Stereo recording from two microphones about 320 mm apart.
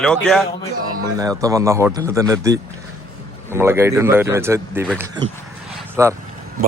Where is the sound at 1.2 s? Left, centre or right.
Centre.